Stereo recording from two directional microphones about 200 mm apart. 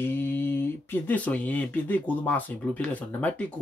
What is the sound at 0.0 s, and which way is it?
Speech, 10° left (ahead or behind).